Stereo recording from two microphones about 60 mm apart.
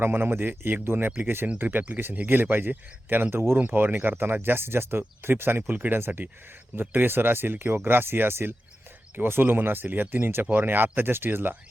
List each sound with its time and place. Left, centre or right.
0.0 s speech: right
1.6 s speech: right
3.6 s speech: right